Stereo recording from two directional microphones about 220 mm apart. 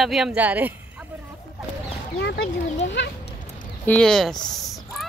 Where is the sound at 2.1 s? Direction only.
50° left (ahead or behind).